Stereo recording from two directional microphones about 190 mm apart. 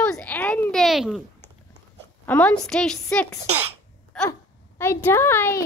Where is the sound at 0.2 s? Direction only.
10° left (ahead or behind).